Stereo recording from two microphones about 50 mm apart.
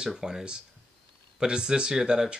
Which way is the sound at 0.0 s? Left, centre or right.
Centre.